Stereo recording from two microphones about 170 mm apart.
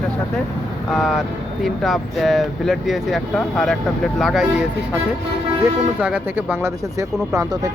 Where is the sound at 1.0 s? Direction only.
Centre (ahead or behind).